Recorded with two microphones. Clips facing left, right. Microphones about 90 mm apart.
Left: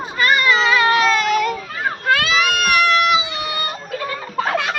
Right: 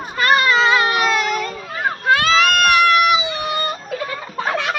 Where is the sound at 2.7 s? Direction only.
20° right (ahead or behind).